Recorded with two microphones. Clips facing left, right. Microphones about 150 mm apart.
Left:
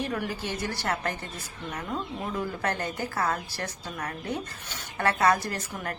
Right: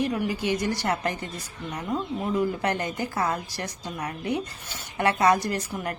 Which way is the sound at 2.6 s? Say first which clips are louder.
Right 3 dB; 15° right (ahead or behind).